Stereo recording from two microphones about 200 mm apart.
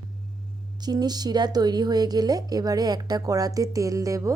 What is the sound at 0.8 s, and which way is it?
Speech, 20° right (ahead or behind).